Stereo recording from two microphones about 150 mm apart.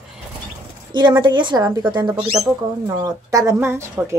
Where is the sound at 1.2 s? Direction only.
30° right (ahead or behind).